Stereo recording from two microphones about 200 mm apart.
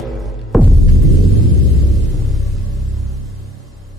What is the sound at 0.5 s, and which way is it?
Throbbing, centre (ahead or behind).